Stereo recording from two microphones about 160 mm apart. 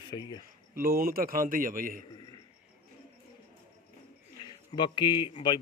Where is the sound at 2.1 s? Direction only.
25° left (ahead or behind).